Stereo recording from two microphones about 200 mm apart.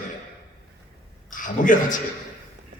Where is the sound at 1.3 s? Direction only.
40° left (ahead or behind).